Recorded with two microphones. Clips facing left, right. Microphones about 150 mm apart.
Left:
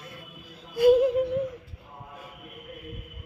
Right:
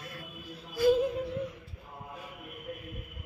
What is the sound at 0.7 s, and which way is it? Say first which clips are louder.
Yodeling: left 6 dB; 60° left (ahead or behind).